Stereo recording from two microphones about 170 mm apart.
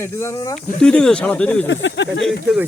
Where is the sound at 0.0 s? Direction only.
15° left (ahead or behind).